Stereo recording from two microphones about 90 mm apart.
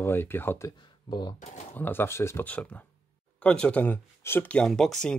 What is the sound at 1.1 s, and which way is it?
Speech, 55° left (ahead or behind).